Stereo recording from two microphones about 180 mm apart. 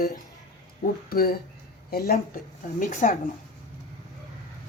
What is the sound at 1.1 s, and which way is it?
A woman's voice, 55° left (ahead or behind).